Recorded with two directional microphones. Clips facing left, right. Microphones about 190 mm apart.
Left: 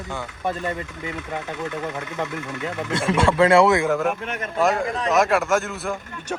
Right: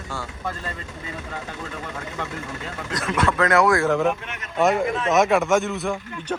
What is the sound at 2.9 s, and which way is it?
Speech, 30° left (ahead or behind).